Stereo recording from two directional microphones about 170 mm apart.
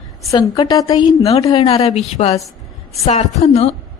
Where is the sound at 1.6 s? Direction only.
35° left (ahead or behind).